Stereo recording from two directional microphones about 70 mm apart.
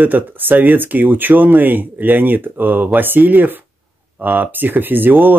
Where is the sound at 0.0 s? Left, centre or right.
Right.